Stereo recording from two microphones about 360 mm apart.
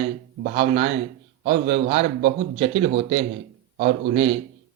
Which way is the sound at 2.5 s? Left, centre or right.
Centre.